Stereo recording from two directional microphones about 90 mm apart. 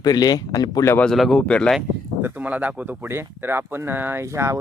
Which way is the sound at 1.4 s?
15° left (ahead or behind).